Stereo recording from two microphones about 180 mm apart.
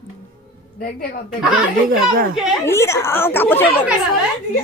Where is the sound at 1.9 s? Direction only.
55° right (ahead or behind).